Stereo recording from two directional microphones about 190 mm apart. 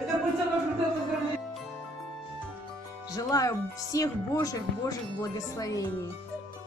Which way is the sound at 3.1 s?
20° left (ahead or behind).